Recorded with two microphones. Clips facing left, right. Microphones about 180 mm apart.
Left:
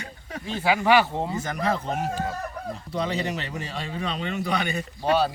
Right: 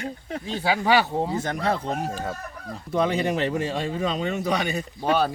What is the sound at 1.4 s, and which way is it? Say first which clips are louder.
Speech: right 1 dB; 35° right (ahead or behind).